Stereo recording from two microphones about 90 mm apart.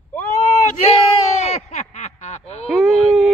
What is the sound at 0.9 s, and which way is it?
Speech, 90° left.